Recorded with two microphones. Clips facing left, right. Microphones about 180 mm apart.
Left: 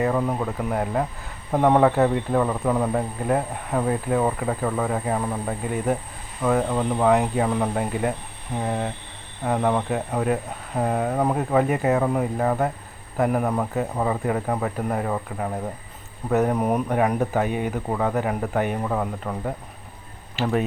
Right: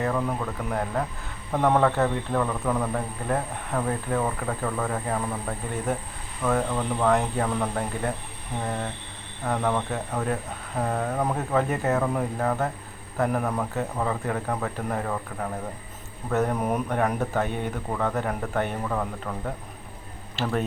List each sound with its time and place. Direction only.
0.0 s speech: 15° left (ahead or behind)